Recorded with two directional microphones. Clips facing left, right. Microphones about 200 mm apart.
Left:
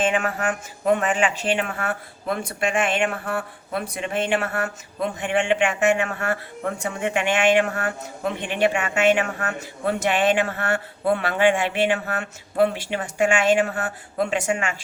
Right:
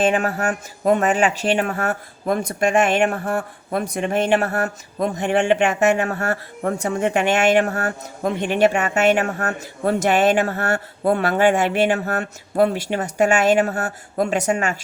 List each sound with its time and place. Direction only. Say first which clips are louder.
0.0 s speech: right 3 dB; 40° right (ahead or behind)